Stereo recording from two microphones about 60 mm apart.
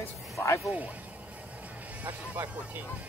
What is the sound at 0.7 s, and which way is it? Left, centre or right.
Speech, right.